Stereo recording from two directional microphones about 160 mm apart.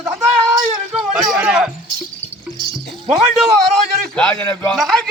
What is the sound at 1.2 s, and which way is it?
Speech, 5° right (ahead or behind).